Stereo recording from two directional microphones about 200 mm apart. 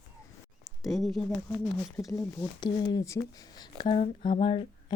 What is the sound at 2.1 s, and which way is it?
Speech, 20° left (ahead or behind).